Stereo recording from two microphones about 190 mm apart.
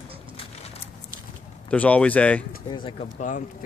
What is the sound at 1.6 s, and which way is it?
Speech, 5° left (ahead or behind).